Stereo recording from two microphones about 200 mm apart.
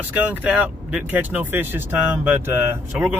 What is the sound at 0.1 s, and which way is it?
Speech, 10° right (ahead or behind).